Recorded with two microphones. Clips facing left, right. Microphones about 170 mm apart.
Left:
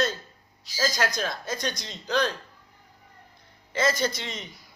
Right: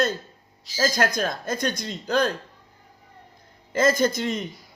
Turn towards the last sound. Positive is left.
turn(degrees=-50)  # may be behind; listen again after turning